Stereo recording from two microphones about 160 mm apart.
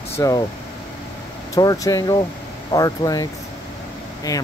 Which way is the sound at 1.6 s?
25° left (ahead or behind).